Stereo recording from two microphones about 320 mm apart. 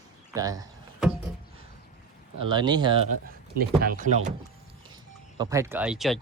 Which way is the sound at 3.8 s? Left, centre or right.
Right.